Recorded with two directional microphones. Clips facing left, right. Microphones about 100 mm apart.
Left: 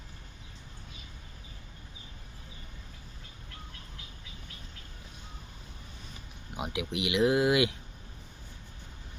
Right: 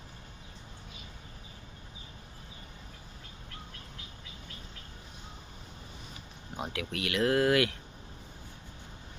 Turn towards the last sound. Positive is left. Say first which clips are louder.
# left 1 dB
turn(degrees=15)  # may be behind; listen again after turning